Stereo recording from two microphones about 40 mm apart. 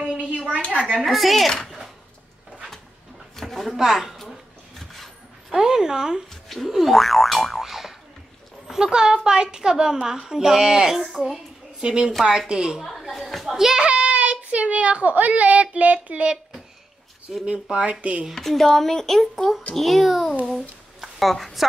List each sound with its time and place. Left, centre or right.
0.0 s a sound: right
0.7 s a woman's voice: right
1.0 s speech: centre
3.3 s a sound: centre
4.7 s vehicle: centre
5.5 s a woman's voice: centre
6.7 s speech: centre
7.6 s boing: centre
8.6 s a woman's voice: centre
11.8 s a woman's voice: right
12.8 s speech: centre
13.7 s speech: right
17.5 s speech: right
18.3 s speech: centre